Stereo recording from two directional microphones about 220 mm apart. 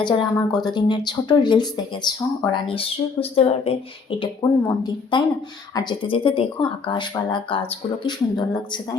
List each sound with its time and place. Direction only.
0.0 s speech: 20° left (ahead or behind)